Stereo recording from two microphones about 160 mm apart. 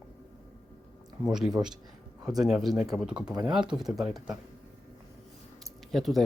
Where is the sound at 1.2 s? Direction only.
5° right (ahead or behind).